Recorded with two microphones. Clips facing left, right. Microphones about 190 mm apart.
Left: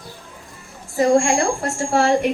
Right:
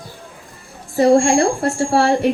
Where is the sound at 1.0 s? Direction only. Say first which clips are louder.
Right 4 dB; 35° right (ahead or behind).